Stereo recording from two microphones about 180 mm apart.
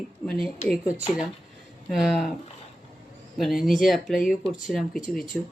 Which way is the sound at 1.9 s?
Centre (ahead or behind).